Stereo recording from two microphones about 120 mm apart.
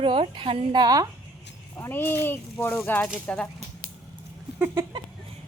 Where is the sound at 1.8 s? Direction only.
20° left (ahead or behind).